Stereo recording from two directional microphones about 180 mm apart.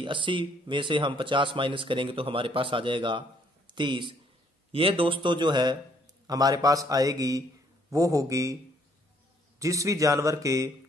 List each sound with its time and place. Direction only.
0.0 s a man's voice: 25° right (ahead or behind)
9.6 s a man's voice: 15° right (ahead or behind)